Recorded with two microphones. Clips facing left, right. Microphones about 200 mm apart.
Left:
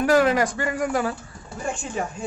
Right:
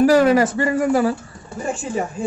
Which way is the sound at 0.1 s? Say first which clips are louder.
Right 5 dB; 5° right (ahead or behind).